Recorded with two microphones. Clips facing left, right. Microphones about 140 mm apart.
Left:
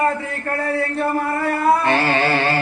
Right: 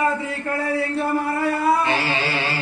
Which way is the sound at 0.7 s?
55° left (ahead or behind).